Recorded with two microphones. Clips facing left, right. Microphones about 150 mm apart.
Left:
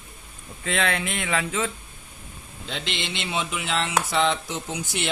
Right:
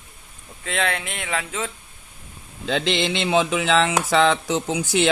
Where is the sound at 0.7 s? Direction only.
55° right (ahead or behind).